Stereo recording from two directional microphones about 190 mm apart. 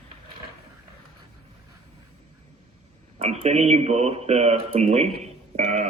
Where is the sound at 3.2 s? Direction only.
35° right (ahead or behind).